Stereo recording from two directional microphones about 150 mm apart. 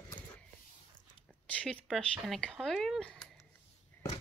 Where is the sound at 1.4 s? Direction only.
10° left (ahead or behind).